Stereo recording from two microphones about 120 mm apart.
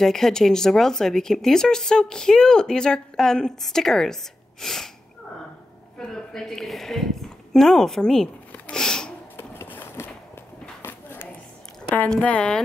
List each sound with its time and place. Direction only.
0.0 s speech: 5° left (ahead or behind)
5.9 s a woman's voice: 5° left (ahead or behind)
9.4 s a sound: 15° left (ahead or behind)
11.9 s speech: 10° left (ahead or behind)